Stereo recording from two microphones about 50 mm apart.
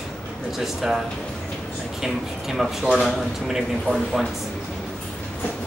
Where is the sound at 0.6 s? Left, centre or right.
Centre.